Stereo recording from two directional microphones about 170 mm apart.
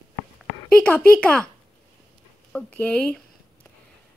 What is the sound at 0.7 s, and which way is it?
Speech, 5° left (ahead or behind).